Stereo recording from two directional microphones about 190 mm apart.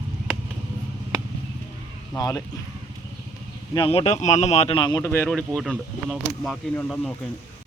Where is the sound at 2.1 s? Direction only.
15° left (ahead or behind).